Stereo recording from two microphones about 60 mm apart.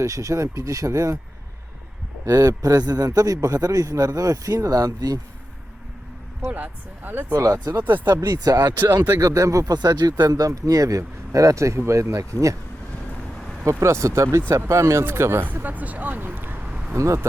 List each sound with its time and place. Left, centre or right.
0.0 s speech: right
2.2 s a man's voice: right
6.5 s speech: right
7.3 s speech: right
7.7 s speech: right
8.1 s speech: right
9.2 s speech: right
10.3 s speech: right
12.3 s speech: right
13.7 s speech: right
15.6 s speech: right
16.6 s a sound: centre
16.9 s speech: right